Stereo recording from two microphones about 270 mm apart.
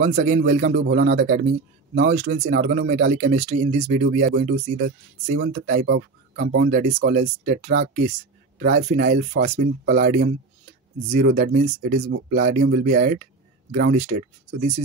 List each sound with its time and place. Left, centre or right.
0.0 s speech: right
2.0 s speech: right
2.3 s speech: right
3.1 s speech: right
13.9 s speech: right